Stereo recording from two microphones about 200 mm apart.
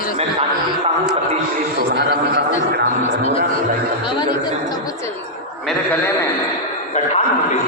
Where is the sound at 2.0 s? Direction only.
55° right (ahead or behind).